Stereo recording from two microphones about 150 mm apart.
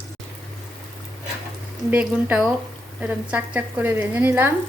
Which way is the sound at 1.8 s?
10° right (ahead or behind).